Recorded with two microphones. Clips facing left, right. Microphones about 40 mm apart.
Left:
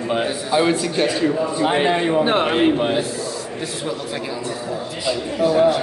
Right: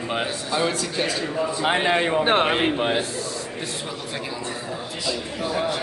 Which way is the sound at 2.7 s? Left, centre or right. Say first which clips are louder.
Left 3 dB; centre.